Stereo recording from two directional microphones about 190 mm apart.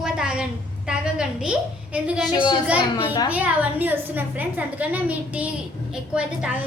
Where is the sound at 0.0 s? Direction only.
5° right (ahead or behind).